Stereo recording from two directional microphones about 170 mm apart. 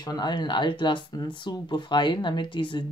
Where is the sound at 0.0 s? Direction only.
25° left (ahead or behind).